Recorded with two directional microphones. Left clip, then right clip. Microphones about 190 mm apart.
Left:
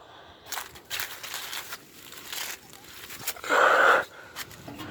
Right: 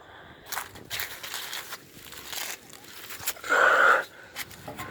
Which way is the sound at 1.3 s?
20° right (ahead or behind).